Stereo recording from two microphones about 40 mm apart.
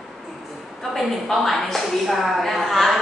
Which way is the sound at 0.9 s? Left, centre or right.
Centre.